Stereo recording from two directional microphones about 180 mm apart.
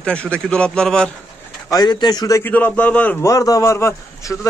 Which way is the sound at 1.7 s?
20° left (ahead or behind).